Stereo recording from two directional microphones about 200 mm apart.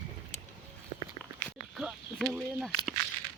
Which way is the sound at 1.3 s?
5° right (ahead or behind).